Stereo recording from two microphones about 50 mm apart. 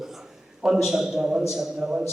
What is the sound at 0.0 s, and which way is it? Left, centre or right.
A man's voice, centre.